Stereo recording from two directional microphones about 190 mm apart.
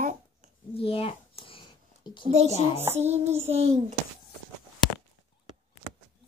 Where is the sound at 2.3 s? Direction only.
35° right (ahead or behind).